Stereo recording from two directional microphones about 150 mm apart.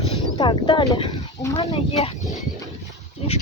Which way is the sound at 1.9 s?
45° left (ahead or behind).